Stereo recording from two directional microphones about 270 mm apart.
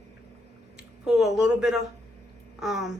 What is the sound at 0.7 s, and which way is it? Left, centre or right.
A woman's voice, centre.